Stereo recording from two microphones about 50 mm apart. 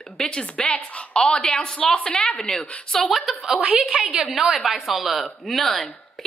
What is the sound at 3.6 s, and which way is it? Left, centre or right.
Speech, right.